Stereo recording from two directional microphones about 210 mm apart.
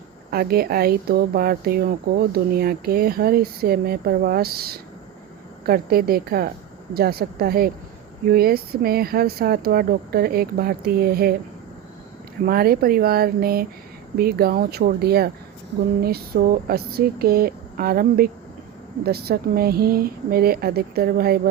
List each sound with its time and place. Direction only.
0.3 s speech: 45° right (ahead or behind)
12.5 s speech: 45° right (ahead or behind)